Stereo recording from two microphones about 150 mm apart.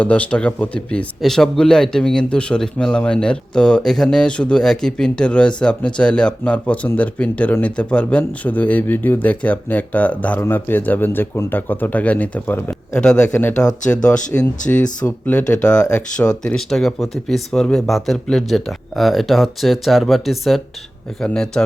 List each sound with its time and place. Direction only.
0.0 s speech: 10° left (ahead or behind)